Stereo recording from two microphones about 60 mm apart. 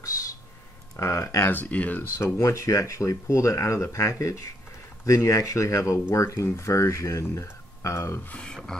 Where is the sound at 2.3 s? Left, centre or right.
Left.